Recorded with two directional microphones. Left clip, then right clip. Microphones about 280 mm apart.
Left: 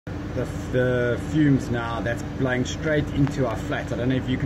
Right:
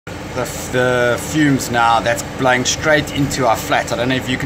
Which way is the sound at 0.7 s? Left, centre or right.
Right.